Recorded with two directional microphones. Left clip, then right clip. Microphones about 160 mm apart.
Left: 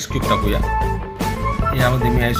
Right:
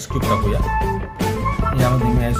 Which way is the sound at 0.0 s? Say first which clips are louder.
Left 1 dB; centre (ahead or behind).